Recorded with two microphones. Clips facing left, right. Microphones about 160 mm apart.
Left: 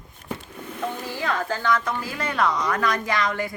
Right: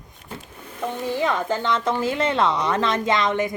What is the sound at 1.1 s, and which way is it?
Speech, 20° right (ahead or behind).